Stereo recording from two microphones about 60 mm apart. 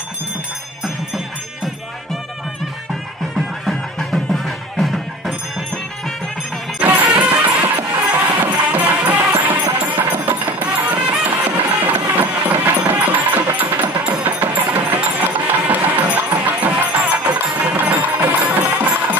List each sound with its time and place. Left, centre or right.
3.7 s music: centre
6.8 s music: right